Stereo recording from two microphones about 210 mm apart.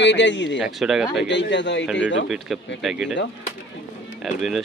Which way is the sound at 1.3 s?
60° left (ahead or behind).